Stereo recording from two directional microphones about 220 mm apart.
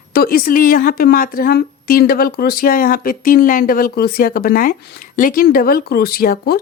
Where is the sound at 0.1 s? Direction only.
45° left (ahead or behind).